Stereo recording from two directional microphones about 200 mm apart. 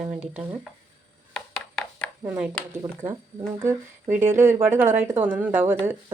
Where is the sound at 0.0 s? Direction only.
35° right (ahead or behind).